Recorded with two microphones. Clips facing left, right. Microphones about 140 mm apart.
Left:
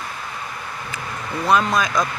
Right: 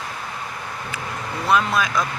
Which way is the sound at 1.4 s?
5° right (ahead or behind).